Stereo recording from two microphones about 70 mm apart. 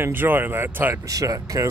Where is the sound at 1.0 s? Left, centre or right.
Right.